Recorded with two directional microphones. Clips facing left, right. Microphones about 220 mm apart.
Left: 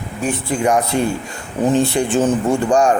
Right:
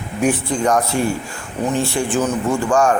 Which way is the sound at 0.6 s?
10° left (ahead or behind).